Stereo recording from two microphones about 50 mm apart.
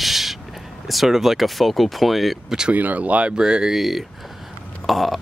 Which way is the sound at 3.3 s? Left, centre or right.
Centre.